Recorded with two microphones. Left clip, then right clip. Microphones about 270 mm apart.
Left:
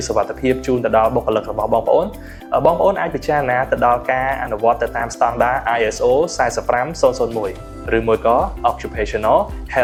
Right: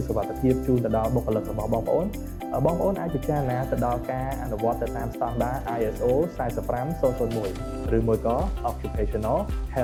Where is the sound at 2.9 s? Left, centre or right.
Centre.